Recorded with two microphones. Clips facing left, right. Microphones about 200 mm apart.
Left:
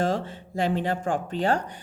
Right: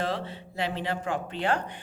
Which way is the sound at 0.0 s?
45° left (ahead or behind).